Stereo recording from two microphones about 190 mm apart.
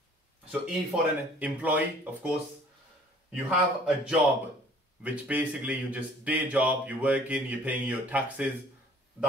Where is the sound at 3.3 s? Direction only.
5° right (ahead or behind).